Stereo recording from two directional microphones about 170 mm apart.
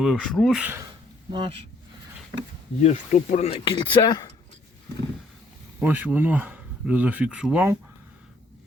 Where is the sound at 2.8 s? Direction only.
45° left (ahead or behind); by 4.3 s 25° left (ahead or behind).